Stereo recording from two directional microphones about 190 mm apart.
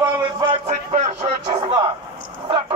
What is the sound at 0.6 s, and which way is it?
Music, 35° right (ahead or behind).